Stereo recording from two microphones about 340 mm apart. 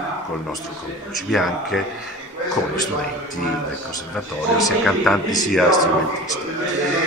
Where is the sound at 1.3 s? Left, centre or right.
Centre.